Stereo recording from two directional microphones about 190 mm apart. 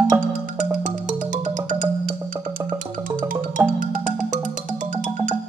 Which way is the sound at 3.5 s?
45° right (ahead or behind).